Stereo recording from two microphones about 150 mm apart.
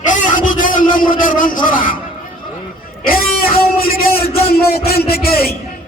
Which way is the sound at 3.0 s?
75° left (ahead or behind).